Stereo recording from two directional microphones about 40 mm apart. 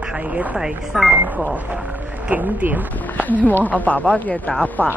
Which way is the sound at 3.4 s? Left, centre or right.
Left.